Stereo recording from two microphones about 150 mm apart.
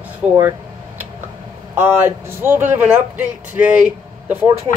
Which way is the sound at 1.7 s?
15° right (ahead or behind).